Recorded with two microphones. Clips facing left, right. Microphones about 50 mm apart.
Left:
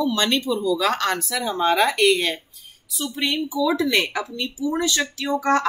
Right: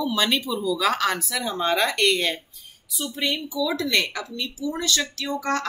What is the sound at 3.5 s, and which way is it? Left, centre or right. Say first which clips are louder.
Speech: left 5 dB; centre.